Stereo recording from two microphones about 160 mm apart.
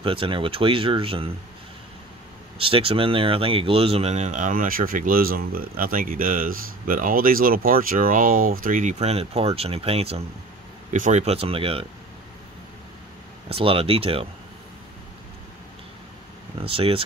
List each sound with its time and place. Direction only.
0.0 s speech: 35° right (ahead or behind)
2.6 s speech: 35° right (ahead or behind)
13.5 s speech: 35° right (ahead or behind)
16.5 s speech: 35° right (ahead or behind)